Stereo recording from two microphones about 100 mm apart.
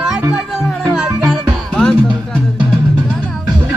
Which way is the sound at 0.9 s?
5° right (ahead or behind).